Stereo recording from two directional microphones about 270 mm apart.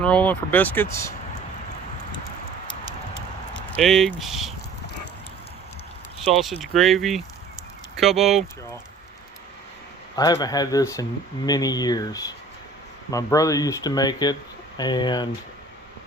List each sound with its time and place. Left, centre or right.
0.0 s speech: centre
3.5 s speech: centre
6.3 s speech: centre
10.2 s speech: centre